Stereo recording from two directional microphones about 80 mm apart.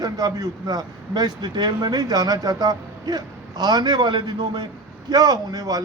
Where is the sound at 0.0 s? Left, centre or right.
Right.